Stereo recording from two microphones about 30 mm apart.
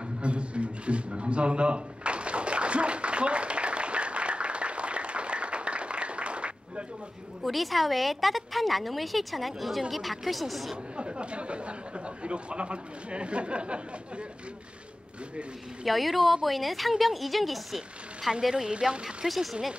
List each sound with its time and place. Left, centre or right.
0.2 s a sound: right
7.4 s a woman's voice: centre
11.0 s a man's voice: right
15.8 s a woman's voice: centre
18.5 s speech: right
19.2 s a woman's voice: centre